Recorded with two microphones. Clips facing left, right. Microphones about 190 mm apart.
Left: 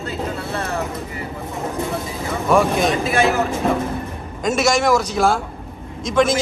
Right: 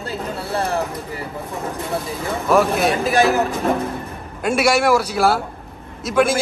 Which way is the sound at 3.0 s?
35° right (ahead or behind).